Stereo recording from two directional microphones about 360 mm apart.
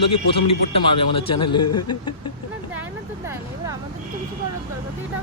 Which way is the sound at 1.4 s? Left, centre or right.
Left.